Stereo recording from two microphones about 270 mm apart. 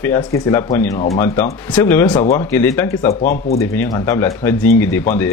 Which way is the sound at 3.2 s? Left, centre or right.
Left.